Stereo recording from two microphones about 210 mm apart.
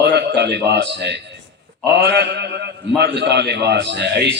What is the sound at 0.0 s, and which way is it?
A man's voice, 55° right (ahead or behind).